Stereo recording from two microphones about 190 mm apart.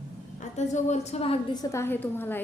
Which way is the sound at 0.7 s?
40° left (ahead or behind).